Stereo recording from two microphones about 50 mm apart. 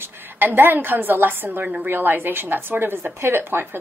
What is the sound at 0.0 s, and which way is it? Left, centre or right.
A woman's voice, right.